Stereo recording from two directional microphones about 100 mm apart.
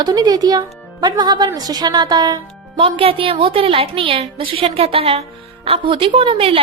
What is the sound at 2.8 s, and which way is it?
A woman's voice, 70° right (ahead or behind).